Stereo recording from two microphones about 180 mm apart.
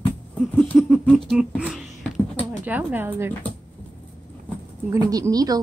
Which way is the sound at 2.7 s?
10° right (ahead or behind).